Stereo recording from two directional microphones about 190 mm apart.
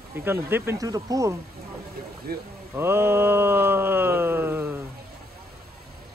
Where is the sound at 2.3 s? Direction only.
55° right (ahead or behind).